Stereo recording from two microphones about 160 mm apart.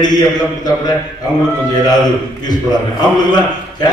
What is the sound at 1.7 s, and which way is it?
A man's voice, 25° left (ahead or behind).